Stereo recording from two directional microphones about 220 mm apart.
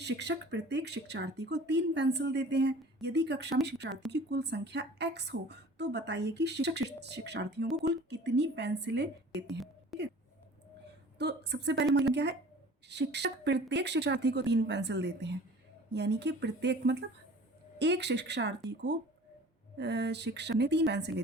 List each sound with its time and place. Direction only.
0.0 s speech: 50° right (ahead or behind)
9.5 s a sound: centre (ahead or behind)
11.2 s speech: 50° right (ahead or behind)